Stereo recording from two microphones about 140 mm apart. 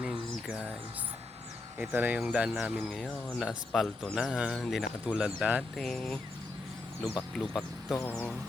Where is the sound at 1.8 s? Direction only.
10° right (ahead or behind).